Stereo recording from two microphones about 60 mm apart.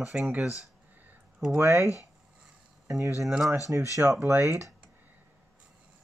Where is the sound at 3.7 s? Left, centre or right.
Right.